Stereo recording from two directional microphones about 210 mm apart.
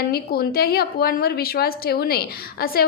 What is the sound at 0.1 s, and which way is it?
A woman's voice, 45° left (ahead or behind).